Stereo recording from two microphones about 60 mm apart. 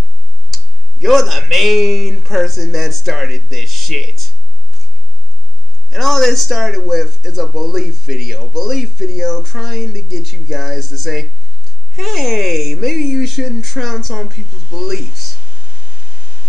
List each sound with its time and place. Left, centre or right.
1.0 s speech: centre
5.9 s speech: centre
14.4 s speech: right
14.8 s speech: centre
15.3 s a sound: right